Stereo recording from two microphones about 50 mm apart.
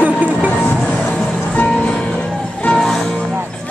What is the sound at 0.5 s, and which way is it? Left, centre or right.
Music, left.